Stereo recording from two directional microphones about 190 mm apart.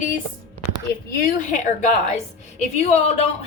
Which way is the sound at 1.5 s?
40° left (ahead or behind).